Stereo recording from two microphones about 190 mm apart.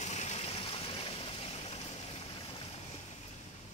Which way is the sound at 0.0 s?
35° left (ahead or behind).